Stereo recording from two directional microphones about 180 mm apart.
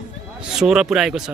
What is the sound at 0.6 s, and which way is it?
Speech, 5° right (ahead or behind).